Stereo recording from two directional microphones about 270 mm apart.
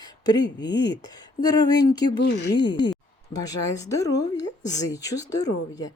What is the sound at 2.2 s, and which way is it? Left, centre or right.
Speech, left.